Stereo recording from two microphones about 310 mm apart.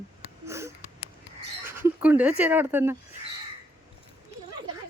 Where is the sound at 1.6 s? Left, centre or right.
Centre.